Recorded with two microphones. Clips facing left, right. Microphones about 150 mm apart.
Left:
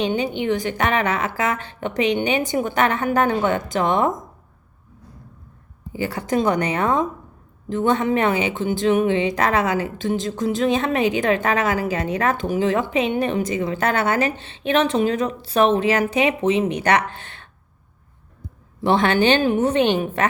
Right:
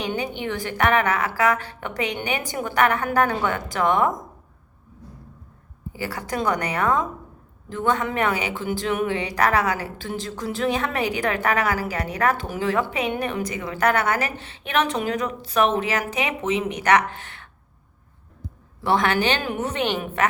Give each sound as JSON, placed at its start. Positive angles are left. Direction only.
{"t": 0.0, "sound": "a woman's voice", "side_deg": 20}
{"t": 5.9, "sound": "a woman's voice", "side_deg": 25}
{"t": 18.8, "sound": "a woman's voice", "side_deg": 25}